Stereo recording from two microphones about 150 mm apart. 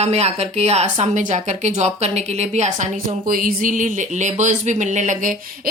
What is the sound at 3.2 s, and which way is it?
Speech, 70° right (ahead or behind).